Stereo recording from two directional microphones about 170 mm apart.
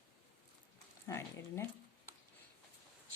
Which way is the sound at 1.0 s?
15° left (ahead or behind).